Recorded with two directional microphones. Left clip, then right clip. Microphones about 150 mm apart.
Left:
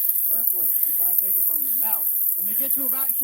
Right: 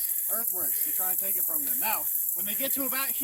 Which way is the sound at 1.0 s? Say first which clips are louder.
Left 2 dB; centre (ahead or behind).